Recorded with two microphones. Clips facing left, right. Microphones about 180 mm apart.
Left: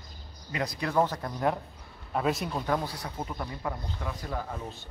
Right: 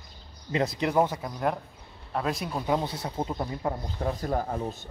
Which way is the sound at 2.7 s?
25° right (ahead or behind).